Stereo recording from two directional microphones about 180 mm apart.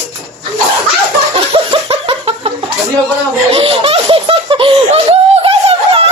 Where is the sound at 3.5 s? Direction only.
30° right (ahead or behind).